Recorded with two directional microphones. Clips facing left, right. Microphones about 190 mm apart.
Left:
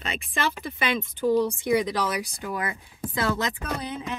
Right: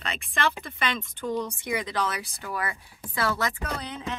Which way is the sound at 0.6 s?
5° left (ahead or behind).